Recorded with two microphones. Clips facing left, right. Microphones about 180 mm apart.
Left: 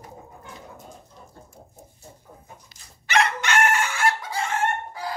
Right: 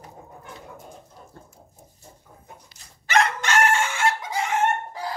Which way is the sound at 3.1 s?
40° right (ahead or behind).